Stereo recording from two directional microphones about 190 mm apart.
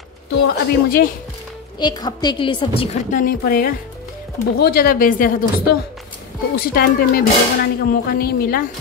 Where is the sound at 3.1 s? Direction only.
45° left (ahead or behind).